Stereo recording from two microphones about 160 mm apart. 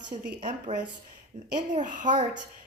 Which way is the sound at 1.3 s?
50° right (ahead or behind).